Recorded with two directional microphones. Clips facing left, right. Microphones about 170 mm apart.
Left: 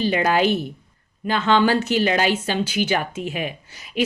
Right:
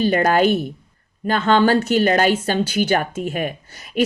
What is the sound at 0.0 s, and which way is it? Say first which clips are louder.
Speech: right 3 dB; 50° right (ahead or behind).